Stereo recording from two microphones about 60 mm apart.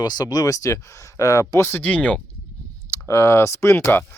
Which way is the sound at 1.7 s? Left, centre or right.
Left.